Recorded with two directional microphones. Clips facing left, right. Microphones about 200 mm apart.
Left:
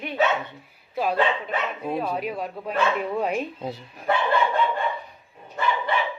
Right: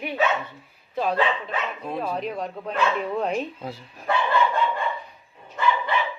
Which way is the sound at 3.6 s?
20° left (ahead or behind).